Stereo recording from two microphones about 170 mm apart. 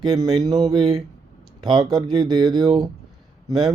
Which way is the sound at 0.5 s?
25° right (ahead or behind).